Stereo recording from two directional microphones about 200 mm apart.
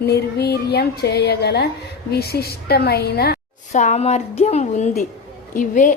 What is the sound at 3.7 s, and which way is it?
Speech, 35° left (ahead or behind).